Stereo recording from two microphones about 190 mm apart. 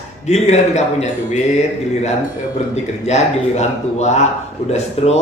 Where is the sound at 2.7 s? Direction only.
35° left (ahead or behind).